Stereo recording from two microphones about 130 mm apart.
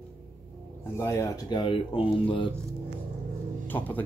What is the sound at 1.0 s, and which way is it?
Speech, 25° left (ahead or behind).